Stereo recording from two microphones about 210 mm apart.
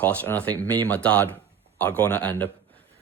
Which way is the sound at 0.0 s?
5° left (ahead or behind).